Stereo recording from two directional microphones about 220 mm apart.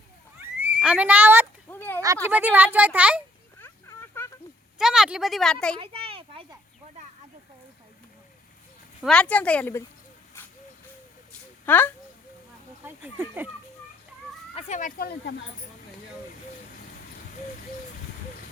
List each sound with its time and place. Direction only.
0.3 s horse: 5° right (ahead or behind)
1.7 s a sound: 10° left (ahead or behind)
2.2 s speech: 10° right (ahead or behind)
3.6 s a sound: 10° left (ahead or behind)
4.8 s a woman's voice: centre (ahead or behind)
5.8 s a sound: 25° right (ahead or behind)
9.0 s a woman's voice: 5° left (ahead or behind)
11.6 s speech: 10° left (ahead or behind)
12.8 s speech: 10° right (ahead or behind)
14.5 s speech: 35° left (ahead or behind)